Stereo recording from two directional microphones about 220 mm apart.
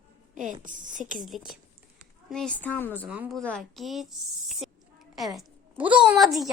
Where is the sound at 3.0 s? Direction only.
5° right (ahead or behind).